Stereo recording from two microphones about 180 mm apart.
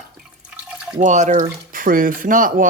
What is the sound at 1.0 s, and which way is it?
Speech, 40° right (ahead or behind).